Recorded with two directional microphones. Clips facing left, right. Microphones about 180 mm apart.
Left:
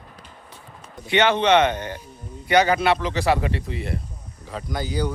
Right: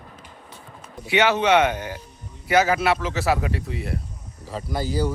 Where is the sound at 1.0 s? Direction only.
5° right (ahead or behind).